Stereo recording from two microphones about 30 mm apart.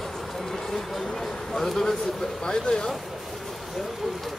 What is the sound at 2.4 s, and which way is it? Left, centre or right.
Speech, left.